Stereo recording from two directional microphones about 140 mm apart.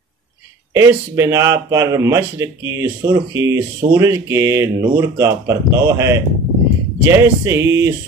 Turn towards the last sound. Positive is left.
turn(degrees=-20)  # may be behind; listen again after turning